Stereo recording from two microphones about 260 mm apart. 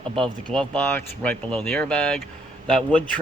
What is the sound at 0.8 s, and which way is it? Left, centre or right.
Speech, centre.